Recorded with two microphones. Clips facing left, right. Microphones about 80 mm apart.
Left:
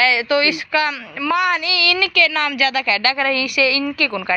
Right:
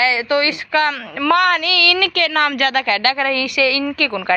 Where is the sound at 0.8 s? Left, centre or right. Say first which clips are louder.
Right 4 dB; right.